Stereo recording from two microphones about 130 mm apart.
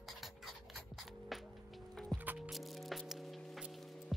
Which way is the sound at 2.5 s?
Centre (ahead or behind).